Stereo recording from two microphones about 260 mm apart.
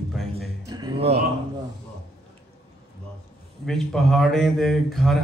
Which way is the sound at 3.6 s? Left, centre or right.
Centre.